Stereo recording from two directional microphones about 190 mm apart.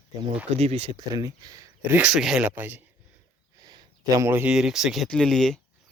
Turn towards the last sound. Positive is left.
turn(degrees=0)  # may be behind; listen again after turning